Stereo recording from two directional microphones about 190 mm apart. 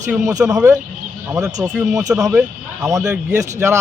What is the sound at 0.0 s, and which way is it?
Speech, 15° right (ahead or behind).